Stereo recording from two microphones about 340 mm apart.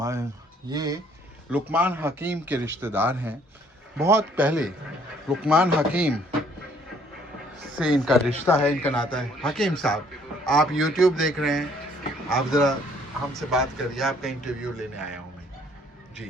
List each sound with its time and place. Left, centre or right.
0.0 s a man's voice: centre
7.8 s a man's voice: centre